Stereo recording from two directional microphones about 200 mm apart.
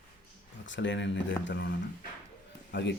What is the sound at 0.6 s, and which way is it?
Speech, 65° left (ahead or behind).